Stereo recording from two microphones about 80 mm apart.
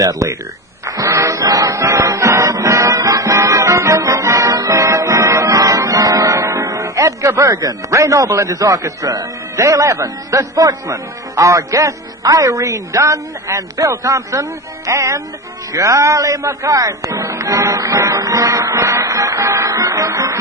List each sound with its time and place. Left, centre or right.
0.0 s speech: right
0.9 s music: right
7.5 s speech: right
7.9 s speech: right
14.8 s music: right
15.7 s speech: right